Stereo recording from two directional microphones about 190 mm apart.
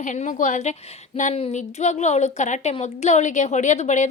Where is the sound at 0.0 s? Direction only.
40° left (ahead or behind).